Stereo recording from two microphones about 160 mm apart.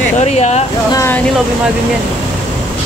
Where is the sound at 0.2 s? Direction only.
45° left (ahead or behind).